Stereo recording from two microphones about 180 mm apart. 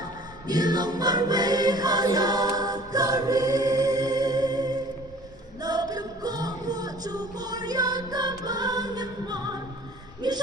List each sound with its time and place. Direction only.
0.4 s choir: 20° right (ahead or behind)
5.6 s music: 20° right (ahead or behind)
10.2 s a sound: 25° right (ahead or behind)